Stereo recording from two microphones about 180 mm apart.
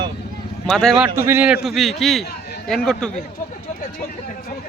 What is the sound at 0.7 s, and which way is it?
Speech, centre (ahead or behind).